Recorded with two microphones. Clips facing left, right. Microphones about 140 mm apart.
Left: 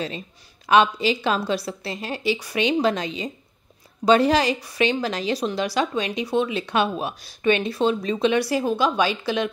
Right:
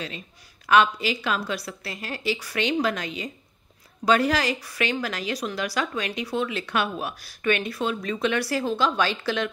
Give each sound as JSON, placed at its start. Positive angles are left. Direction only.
{"t": 0.7, "sound": "a woman's voice", "side_deg": 25}